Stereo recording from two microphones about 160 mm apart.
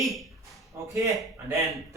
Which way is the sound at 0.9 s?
20° right (ahead or behind).